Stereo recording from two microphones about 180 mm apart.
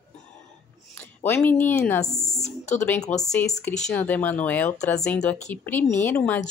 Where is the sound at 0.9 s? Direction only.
10° left (ahead or behind).